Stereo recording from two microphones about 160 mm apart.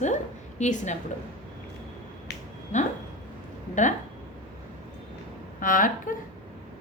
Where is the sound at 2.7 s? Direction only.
50° left (ahead or behind).